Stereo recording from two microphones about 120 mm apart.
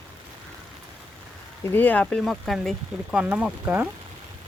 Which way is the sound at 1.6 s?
15° left (ahead or behind).